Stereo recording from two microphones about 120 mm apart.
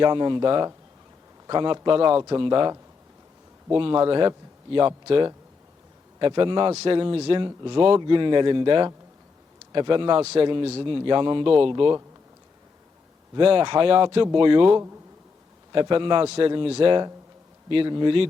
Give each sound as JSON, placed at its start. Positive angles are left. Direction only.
{"t": 0.0, "sound": "speech", "side_deg": -40}
{"t": 13.4, "sound": "speech", "side_deg": -45}
{"t": 16.2, "sound": "a man's voice", "side_deg": -60}